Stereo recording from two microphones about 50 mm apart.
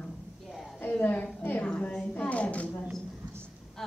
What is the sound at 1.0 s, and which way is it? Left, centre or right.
Speech, left.